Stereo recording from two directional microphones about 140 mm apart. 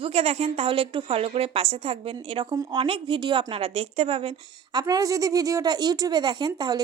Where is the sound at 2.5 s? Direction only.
30° right (ahead or behind).